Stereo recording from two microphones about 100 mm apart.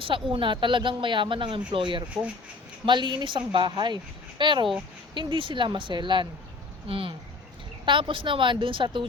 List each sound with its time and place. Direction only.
0.0 s speech: 60° right (ahead or behind)
6.8 s speech: 65° right (ahead or behind)